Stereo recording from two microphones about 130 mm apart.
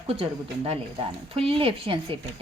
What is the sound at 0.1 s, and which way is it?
A woman's voice, 50° right (ahead or behind).